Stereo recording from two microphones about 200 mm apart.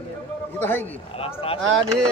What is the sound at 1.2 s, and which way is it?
Speech, 30° left (ahead or behind).